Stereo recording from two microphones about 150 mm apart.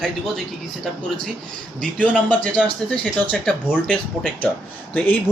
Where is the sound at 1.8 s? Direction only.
5° left (ahead or behind).